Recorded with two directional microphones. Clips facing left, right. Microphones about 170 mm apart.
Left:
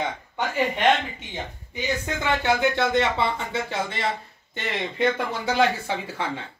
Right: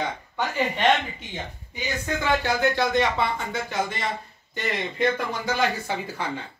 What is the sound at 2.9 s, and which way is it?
Speech, 25° left (ahead or behind).